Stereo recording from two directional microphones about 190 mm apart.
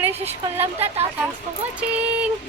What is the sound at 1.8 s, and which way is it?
Speech, 5° right (ahead or behind).